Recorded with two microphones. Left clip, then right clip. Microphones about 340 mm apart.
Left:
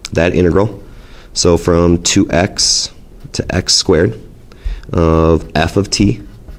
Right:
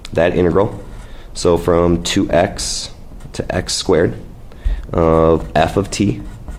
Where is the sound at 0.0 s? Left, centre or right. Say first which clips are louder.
Left 1 dB; left.